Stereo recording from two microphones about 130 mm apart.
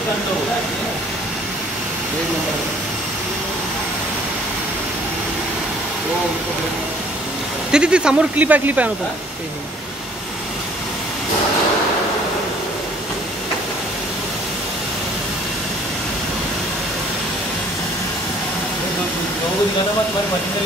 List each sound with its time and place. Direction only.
7.7 s speech: 5° right (ahead or behind)